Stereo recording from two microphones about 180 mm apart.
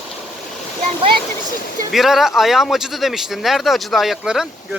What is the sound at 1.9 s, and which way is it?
Speech, centre (ahead or behind).